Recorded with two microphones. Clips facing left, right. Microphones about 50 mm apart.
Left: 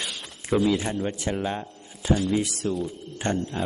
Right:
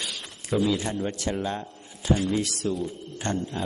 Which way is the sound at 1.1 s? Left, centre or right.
Left.